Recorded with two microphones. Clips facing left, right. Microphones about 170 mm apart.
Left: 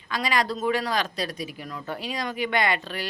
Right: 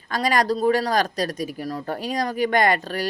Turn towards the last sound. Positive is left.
turn(degrees=-45)  # may be behind; listen again after turning